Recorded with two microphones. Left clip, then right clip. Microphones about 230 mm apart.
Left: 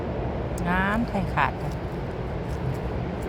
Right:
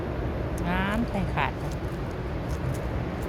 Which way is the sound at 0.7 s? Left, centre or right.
Centre.